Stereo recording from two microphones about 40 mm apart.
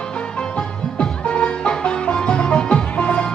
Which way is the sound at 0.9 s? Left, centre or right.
Left.